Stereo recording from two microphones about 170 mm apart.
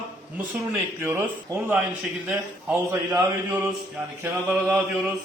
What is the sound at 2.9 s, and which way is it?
Speech, 20° right (ahead or behind).